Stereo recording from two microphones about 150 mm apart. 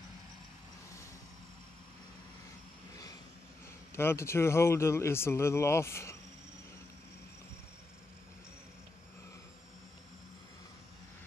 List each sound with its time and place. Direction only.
3.9 s speech: 15° left (ahead or behind)